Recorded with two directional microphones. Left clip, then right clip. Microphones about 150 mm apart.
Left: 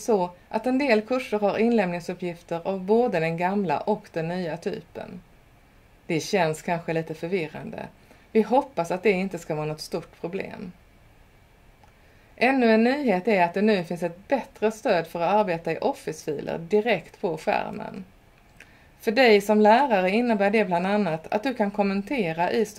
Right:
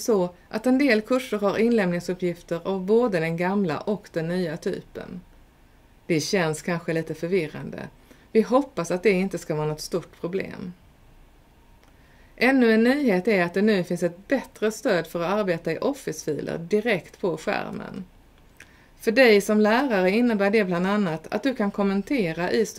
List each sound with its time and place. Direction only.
0.0 s a woman's voice: 55° right (ahead or behind)
6.0 s a woman's voice: 45° right (ahead or behind)
12.4 s a woman's voice: 55° right (ahead or behind); by 22.8 s 40° right (ahead or behind)